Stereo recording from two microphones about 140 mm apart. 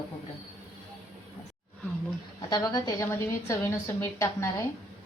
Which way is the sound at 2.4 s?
30° left (ahead or behind).